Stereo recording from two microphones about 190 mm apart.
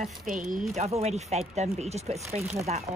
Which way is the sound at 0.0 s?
45° right (ahead or behind).